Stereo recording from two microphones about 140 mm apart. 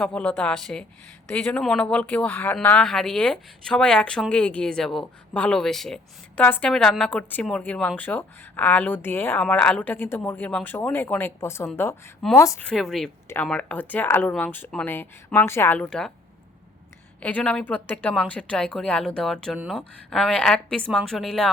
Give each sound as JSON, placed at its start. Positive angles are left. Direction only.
{"t": 0.0, "sound": "speech", "side_deg": 10}
{"t": 12.6, "sound": "speech", "side_deg": 0}
{"t": 17.2, "sound": "speech", "side_deg": 10}